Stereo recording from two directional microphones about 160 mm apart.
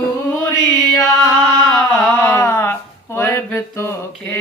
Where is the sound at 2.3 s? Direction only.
15° left (ahead or behind).